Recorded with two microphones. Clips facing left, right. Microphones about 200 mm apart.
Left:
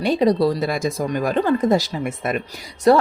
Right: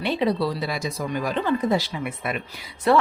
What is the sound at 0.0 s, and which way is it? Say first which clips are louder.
Speech: left 6 dB; 40° left (ahead or behind).